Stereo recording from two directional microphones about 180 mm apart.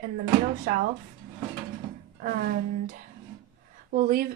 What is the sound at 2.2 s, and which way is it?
Speech, 55° right (ahead or behind).